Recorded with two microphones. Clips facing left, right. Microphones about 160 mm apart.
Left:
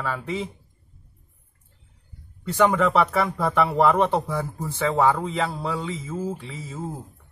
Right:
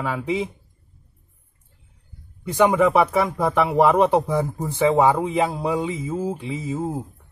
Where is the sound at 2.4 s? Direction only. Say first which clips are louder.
Right 3 dB; 15° right (ahead or behind).